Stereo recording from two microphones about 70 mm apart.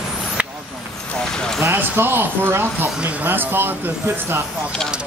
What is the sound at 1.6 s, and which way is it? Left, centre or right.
Speech, right.